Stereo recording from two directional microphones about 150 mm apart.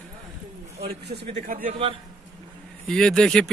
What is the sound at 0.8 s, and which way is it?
Speech, 90° right.